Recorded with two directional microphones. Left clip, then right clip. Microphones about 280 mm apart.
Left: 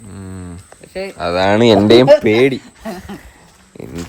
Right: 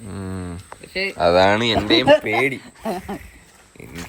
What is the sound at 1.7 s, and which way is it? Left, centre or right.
Speech, left.